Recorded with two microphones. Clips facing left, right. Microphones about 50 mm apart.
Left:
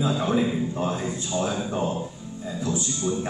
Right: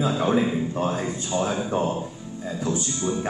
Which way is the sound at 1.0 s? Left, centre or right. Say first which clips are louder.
Right 1 dB; right.